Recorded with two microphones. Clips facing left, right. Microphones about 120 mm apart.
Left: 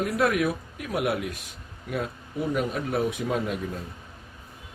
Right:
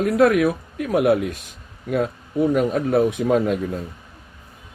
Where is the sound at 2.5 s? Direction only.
50° right (ahead or behind).